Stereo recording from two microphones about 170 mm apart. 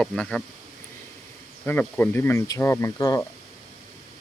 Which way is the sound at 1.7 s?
10° left (ahead or behind).